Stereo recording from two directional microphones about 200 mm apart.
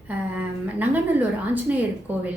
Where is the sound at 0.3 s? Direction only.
10° right (ahead or behind).